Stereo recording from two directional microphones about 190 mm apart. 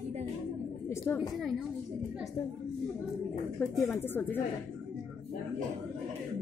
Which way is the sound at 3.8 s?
10° left (ahead or behind).